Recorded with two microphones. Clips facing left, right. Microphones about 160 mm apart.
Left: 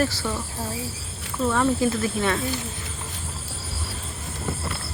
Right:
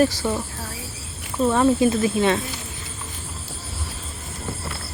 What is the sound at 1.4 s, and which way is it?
Speech, 20° right (ahead or behind).